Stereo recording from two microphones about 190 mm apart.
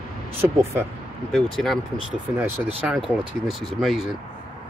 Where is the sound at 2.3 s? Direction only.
10° right (ahead or behind).